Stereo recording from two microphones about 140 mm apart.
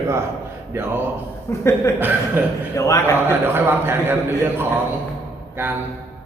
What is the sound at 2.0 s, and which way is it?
Speech, 15° right (ahead or behind).